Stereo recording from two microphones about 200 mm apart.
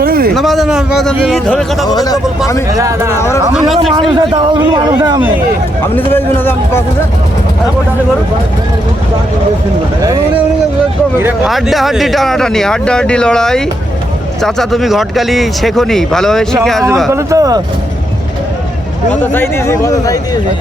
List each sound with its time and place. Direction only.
0.0 s a sound: 50° right (ahead or behind)
0.3 s speech: centre (ahead or behind)
1.9 s speech: 20° left (ahead or behind)
2.7 s speech: 15° right (ahead or behind)
3.2 s speech: 15° left (ahead or behind)
3.5 s speech: centre (ahead or behind)
4.1 s speech: 25° right (ahead or behind)
6.1 s speech: 10° left (ahead or behind)
11.2 s speech: 5° right (ahead or behind)
17.1 s speech: 15° right (ahead or behind)
19.2 s speech: 10° left (ahead or behind)